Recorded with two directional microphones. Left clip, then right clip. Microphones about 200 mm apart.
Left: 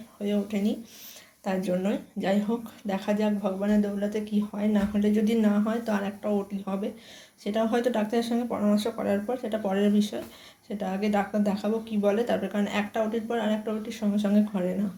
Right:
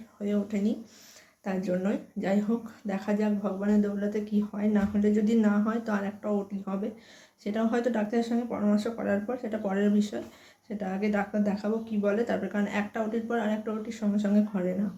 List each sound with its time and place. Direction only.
0.2 s speech: 5° right (ahead or behind)